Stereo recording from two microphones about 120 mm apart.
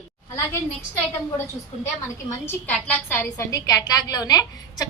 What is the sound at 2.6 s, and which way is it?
A woman's voice, 10° left (ahead or behind).